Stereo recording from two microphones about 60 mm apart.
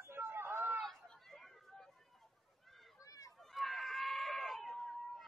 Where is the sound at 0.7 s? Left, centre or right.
Centre.